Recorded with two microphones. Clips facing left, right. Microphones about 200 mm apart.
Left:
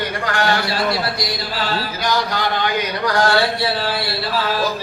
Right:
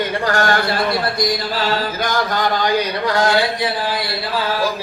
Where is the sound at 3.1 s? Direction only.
20° right (ahead or behind).